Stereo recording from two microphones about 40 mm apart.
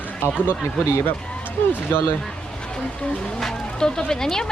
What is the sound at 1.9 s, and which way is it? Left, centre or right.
Speech, left.